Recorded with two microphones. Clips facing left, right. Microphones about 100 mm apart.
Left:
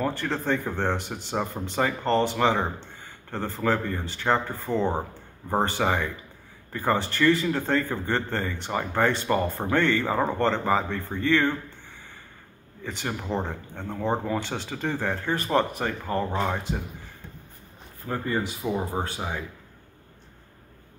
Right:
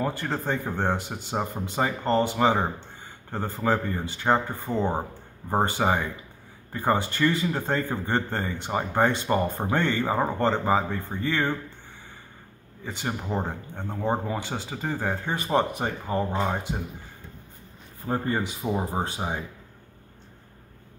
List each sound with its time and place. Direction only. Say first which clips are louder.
0.0 s a man's voice: left 1 dB; 10° right (ahead or behind)
12.8 s a man's voice: even; 5° right (ahead or behind)
18.0 s speech: right 1 dB; 35° right (ahead or behind)
18.6 s speech: even; 25° right (ahead or behind)